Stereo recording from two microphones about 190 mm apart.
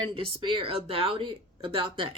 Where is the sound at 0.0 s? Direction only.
25° right (ahead or behind).